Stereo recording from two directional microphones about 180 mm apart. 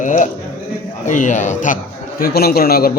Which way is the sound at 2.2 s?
60° left (ahead or behind).